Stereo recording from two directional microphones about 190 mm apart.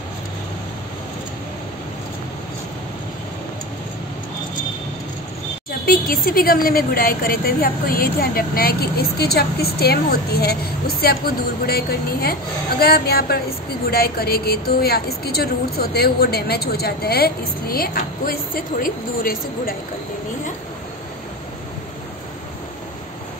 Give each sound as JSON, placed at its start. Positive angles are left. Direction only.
{"t": 5.9, "sound": "a woman's voice", "side_deg": 50}